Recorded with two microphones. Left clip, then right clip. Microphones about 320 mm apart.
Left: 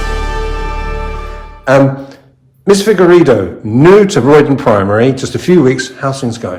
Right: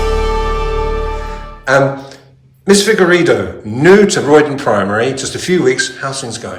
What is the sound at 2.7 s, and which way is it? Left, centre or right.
A man's voice, centre.